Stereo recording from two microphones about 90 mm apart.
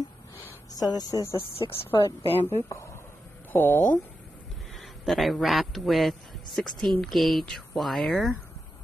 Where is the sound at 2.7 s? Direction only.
35° left (ahead or behind).